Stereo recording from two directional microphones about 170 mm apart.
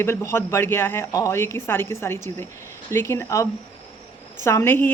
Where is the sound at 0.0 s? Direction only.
15° left (ahead or behind).